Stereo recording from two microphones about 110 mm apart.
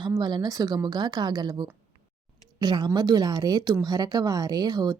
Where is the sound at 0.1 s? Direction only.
40° right (ahead or behind).